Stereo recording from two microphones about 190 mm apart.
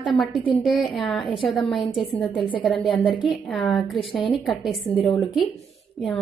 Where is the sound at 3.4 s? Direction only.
Centre (ahead or behind).